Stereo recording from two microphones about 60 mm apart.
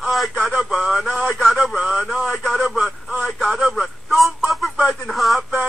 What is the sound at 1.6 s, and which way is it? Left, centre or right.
Speech, centre.